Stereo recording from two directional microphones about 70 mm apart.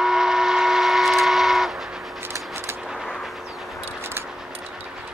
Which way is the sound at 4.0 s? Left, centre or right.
Right.